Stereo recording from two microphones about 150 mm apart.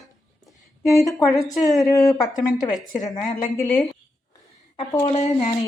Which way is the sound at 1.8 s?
20° left (ahead or behind).